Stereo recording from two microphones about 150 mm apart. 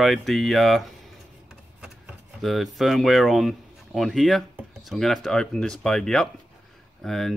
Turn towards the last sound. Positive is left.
turn(degrees=0)  # may be behind; listen again after turning